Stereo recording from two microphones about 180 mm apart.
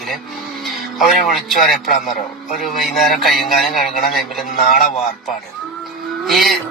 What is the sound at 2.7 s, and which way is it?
Speech, centre (ahead or behind).